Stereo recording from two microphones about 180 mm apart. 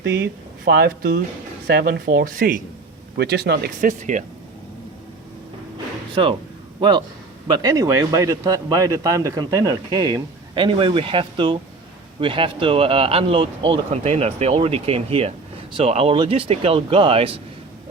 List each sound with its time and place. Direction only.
0.2 s speech: 65° right (ahead or behind)
3.2 s speech: 65° right (ahead or behind); by 4.2 s 45° right (ahead or behind)
6.7 s a man's voice: 25° right (ahead or behind)